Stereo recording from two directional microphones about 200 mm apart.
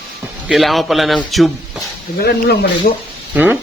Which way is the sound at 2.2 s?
55° left (ahead or behind).